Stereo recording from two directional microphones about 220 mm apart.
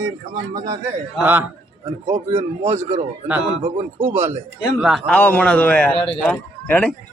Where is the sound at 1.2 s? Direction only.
10° right (ahead or behind).